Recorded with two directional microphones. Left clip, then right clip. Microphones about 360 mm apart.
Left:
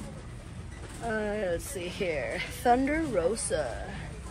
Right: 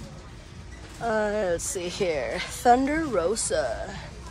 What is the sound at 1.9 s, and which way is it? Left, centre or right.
Speech, centre.